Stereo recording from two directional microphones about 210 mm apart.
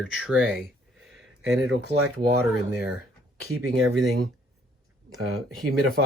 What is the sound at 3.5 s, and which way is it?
Speech, 85° right.